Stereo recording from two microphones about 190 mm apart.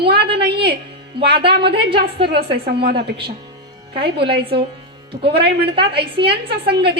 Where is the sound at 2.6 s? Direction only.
55° right (ahead or behind).